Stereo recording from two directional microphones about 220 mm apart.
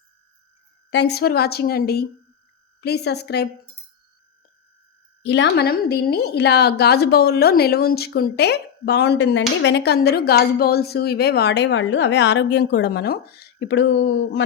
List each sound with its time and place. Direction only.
0.9 s a woman's voice: 50° left (ahead or behind)
5.2 s a woman's voice: 50° left (ahead or behind)